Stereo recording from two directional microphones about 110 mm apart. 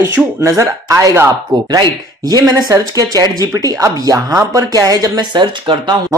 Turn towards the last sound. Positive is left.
turn(degrees=-45)  # may be behind; listen again after turning